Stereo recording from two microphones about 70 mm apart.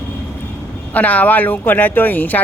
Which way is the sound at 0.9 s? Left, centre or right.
Left.